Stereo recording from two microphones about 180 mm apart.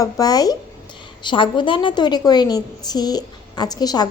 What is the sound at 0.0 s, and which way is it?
A woman's voice, 20° left (ahead or behind).